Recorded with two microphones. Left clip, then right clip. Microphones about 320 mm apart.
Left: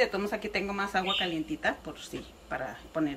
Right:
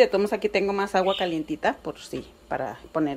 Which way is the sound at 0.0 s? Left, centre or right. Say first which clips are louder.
Right 9 dB; right.